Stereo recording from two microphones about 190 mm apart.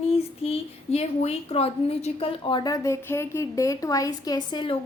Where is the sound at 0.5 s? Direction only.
35° left (ahead or behind).